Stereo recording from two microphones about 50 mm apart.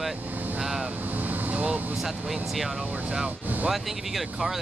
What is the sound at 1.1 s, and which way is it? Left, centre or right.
Vehicle, right.